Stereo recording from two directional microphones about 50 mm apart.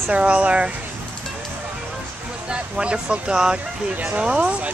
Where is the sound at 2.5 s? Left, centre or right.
Centre.